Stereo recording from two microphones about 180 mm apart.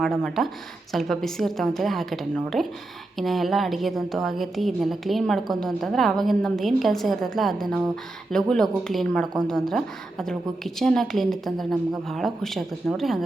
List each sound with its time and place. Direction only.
0.0 s speech: centre (ahead or behind)